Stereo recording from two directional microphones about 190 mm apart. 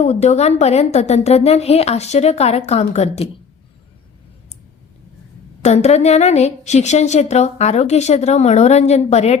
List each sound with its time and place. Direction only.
0.0 s a woman's voice: 35° left (ahead or behind)
5.6 s a woman's voice: 35° left (ahead or behind)